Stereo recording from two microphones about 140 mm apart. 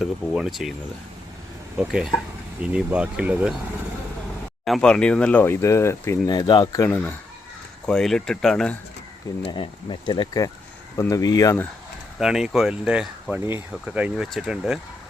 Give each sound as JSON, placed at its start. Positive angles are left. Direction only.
{"t": 0.0, "sound": "speech", "side_deg": 0}
{"t": 1.8, "sound": "speech", "side_deg": -5}
{"t": 4.6, "sound": "speech", "side_deg": 5}
{"t": 7.9, "sound": "speech", "side_deg": 5}
{"t": 9.5, "sound": "speech", "side_deg": 35}
{"t": 12.2, "sound": "speech", "side_deg": -5}